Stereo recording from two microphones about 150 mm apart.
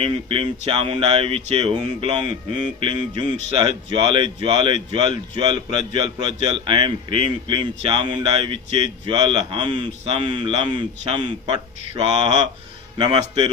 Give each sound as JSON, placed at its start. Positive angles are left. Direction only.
{"t": 0.0, "sound": "a man's voice", "side_deg": -35}